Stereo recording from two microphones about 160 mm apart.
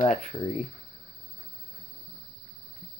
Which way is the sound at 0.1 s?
45° left (ahead or behind).